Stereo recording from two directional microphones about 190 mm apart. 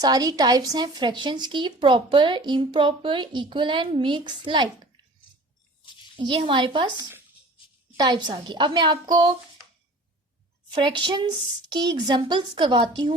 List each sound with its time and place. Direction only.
0.0 s speech: 20° right (ahead or behind)
6.1 s speech: 25° right (ahead or behind)
7.9 s speech: 25° right (ahead or behind)
10.8 s speech: 25° right (ahead or behind)